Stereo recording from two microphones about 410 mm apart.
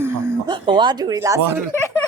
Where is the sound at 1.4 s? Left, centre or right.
Right.